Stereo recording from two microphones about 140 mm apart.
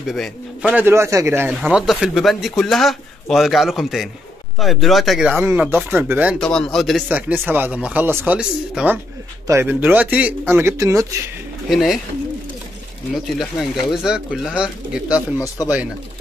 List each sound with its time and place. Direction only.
0.1 s a man's voice: centre (ahead or behind)
0.8 s a man's voice: 20° right (ahead or behind)
1.6 s a man's voice: 5° right (ahead or behind)
5.3 s speech: 10° right (ahead or behind)
6.4 s a man's voice: 5° left (ahead or behind)
7.1 s a man's voice: 10° right (ahead or behind)
11.7 s a man's voice: centre (ahead or behind)
13.1 s a man's voice: centre (ahead or behind)
15.4 s speech: 25° left (ahead or behind)